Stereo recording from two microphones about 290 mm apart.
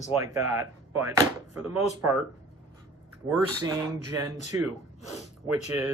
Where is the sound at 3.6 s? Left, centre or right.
Centre.